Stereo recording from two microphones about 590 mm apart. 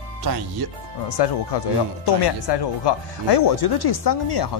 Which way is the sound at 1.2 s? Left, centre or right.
Left.